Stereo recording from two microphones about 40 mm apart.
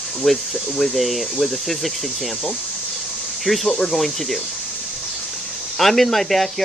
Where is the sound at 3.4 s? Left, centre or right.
Centre.